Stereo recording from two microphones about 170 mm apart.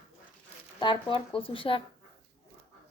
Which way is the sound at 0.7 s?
30° left (ahead or behind).